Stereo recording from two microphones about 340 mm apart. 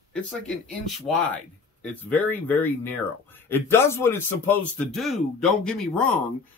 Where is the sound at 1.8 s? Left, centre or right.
Centre.